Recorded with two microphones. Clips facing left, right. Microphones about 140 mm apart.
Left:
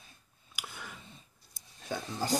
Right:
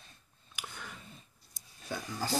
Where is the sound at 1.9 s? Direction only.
20° left (ahead or behind).